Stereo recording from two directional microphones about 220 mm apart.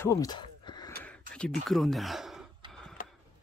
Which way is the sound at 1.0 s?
5° left (ahead or behind).